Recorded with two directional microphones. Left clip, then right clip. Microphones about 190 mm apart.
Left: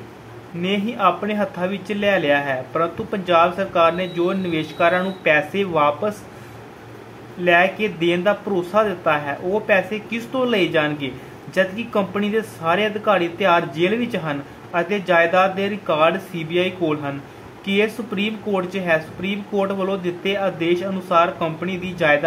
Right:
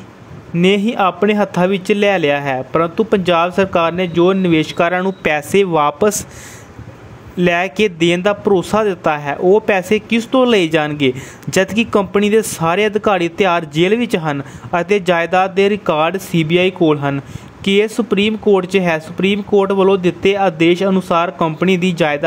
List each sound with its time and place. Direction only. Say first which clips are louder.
0.6 s speech: right 8 dB; 60° right (ahead or behind)
7.4 s speech: right 1 dB; 60° right (ahead or behind)